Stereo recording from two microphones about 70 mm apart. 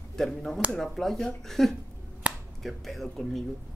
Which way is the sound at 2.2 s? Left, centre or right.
Centre.